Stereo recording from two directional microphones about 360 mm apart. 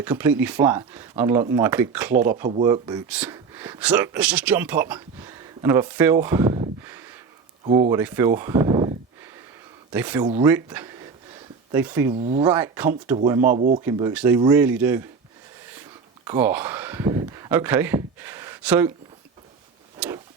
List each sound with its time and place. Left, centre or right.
0.0 s speech: centre
12.1 s speech: centre
12.5 s speech: centre
13.6 s speech: centre
13.8 s speech: centre
15.7 s a sound: centre
20.0 s a sound: centre